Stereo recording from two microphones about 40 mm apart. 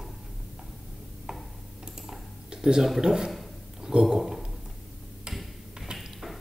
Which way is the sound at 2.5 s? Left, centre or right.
Centre.